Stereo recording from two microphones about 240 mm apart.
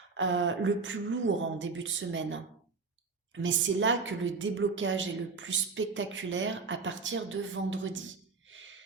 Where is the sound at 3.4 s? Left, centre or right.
Right.